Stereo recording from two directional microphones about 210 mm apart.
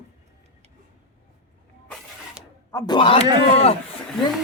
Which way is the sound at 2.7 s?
15° left (ahead or behind).